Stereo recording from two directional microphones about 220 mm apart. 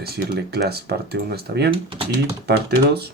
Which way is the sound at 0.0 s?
45° right (ahead or behind).